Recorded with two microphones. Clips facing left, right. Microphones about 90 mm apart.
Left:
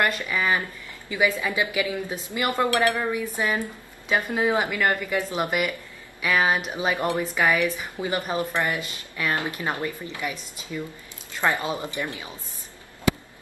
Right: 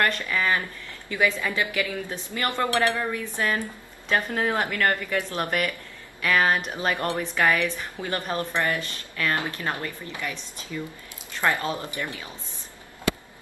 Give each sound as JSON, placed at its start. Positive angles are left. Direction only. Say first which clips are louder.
{"t": 0.0, "sound": "a woman's voice", "louder": "even", "side_deg": 15}